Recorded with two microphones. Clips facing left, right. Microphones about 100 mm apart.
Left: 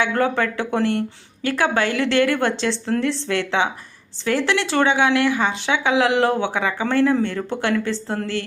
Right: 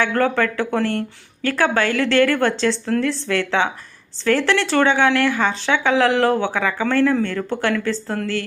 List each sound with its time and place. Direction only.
0.0 s speech: 20° left (ahead or behind)